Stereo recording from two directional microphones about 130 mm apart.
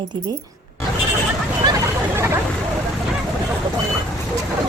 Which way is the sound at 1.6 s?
30° right (ahead or behind).